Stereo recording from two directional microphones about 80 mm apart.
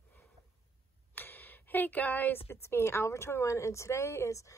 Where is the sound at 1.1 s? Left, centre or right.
Left.